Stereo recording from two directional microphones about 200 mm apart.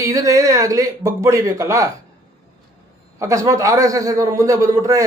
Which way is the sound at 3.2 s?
15° right (ahead or behind).